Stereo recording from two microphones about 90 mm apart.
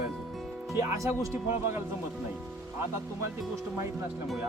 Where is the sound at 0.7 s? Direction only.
35° right (ahead or behind).